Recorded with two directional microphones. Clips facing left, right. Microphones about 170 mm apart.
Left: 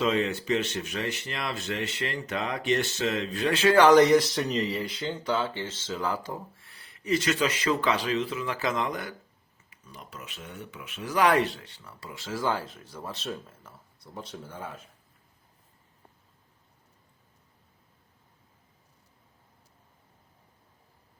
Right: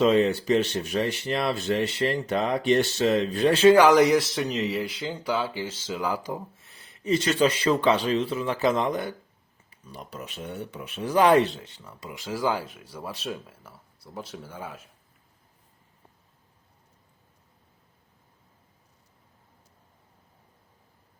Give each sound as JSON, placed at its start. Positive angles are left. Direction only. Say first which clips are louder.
{"t": 0.0, "sound": "speech", "louder": "right 6 dB", "side_deg": -35}
{"t": 3.8, "sound": "speech", "louder": "even", "side_deg": -5}